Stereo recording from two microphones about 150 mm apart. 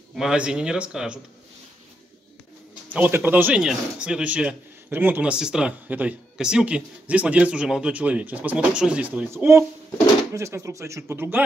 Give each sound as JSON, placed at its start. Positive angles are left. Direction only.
{"t": 0.1, "sound": "speech", "side_deg": -5}
{"t": 2.9, "sound": "speech", "side_deg": -10}